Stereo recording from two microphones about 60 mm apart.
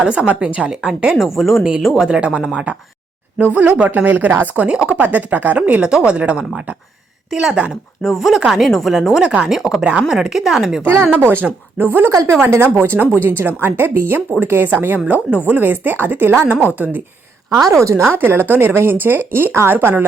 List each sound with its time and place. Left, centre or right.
0.0 s speech: centre
1.1 s speech: centre
2.0 s speech: centre
8.0 s speech: centre
9.8 s speech: centre
10.1 s speech: centre
11.1 s a woman's voice: right
12.1 s a woman's voice: right
17.7 s speech: right
18.1 s a woman's voice: right